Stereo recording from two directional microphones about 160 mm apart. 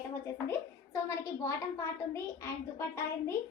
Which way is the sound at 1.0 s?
20° left (ahead or behind).